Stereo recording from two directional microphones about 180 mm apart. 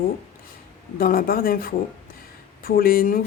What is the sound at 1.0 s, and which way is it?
A woman's voice, 55° left (ahead or behind).